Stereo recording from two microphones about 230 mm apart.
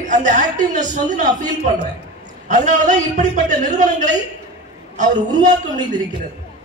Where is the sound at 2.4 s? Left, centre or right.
Right.